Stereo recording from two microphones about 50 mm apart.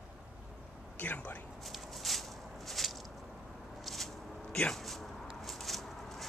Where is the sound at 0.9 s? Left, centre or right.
Left.